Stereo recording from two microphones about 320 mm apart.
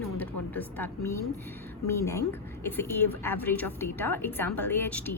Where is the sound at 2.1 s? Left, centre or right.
Centre.